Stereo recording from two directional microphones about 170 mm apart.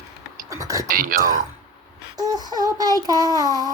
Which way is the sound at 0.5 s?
20° right (ahead or behind).